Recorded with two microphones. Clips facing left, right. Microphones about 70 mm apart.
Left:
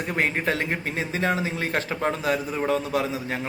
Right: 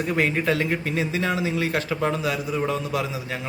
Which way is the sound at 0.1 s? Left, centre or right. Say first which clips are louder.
Right 2 dB; left.